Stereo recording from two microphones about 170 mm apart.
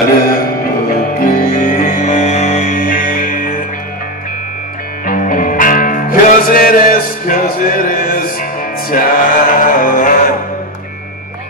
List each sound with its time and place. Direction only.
0.8 s music: 55° left (ahead or behind)
5.0 s music: 55° left (ahead or behind)